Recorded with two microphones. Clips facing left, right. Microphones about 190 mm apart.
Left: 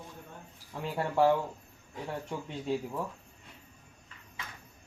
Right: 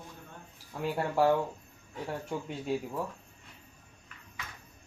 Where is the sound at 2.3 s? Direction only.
5° right (ahead or behind).